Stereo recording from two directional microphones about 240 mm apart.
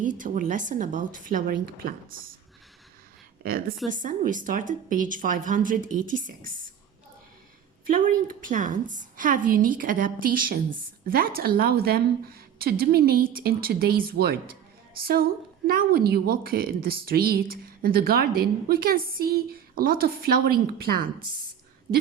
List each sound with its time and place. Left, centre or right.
0.0 s a woman's voice: right
3.4 s a woman's voice: right
7.9 s a woman's voice: right